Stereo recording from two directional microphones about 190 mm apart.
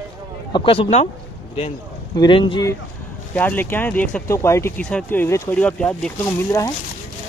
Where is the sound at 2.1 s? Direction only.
25° left (ahead or behind).